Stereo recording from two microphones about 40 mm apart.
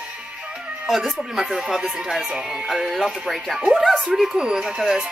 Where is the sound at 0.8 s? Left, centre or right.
Centre.